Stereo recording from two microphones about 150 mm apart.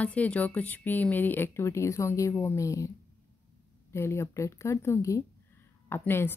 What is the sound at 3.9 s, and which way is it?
A woman's voice, 15° left (ahead or behind).